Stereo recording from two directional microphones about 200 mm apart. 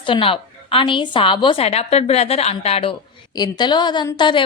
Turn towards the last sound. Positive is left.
turn(degrees=25)  # may be behind; listen again after turning